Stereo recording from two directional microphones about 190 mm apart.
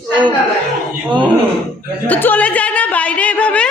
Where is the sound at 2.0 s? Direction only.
10° left (ahead or behind).